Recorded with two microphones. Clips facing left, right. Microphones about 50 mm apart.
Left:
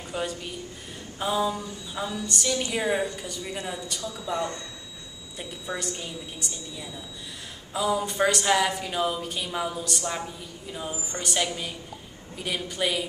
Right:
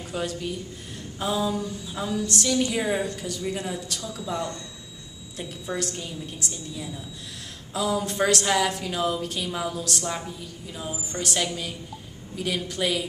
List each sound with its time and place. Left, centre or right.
0.1 s a woman's voice: centre
4.0 s speech: centre
4.3 s a woman's voice: centre
5.4 s a woman's voice: centre
7.7 s a woman's voice: centre